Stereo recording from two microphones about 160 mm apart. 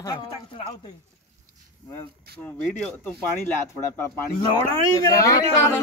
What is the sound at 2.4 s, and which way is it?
Speech, 5° left (ahead or behind).